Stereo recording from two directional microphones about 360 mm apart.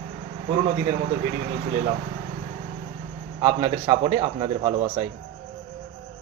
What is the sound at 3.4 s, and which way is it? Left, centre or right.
A man's voice, centre.